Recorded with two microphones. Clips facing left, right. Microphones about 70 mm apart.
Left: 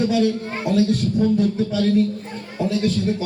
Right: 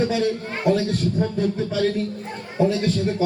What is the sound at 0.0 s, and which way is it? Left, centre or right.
A man's voice, right.